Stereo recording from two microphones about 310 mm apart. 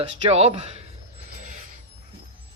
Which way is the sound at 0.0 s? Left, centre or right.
Centre.